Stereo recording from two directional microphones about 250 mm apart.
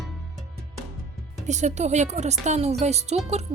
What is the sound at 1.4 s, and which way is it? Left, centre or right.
Speech, right.